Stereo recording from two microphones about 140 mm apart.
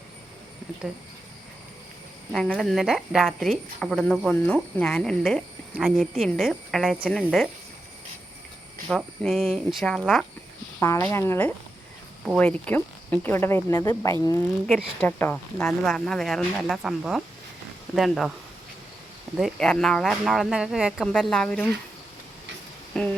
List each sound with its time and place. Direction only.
2.3 s speech: 5° left (ahead or behind)
8.9 s speech: centre (ahead or behind)
10.8 s speech: 20° left (ahead or behind); by 18.3 s centre (ahead or behind)
19.4 s speech: 5° left (ahead or behind)
22.9 s a sound: 5° left (ahead or behind)